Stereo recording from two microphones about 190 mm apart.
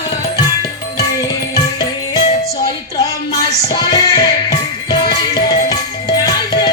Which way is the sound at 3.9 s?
20° left (ahead or behind).